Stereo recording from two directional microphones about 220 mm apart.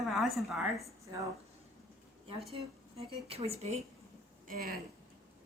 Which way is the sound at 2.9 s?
25° right (ahead or behind).